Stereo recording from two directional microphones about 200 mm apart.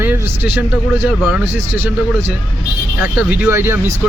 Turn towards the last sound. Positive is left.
turn(degrees=-10)  # may be behind; listen again after turning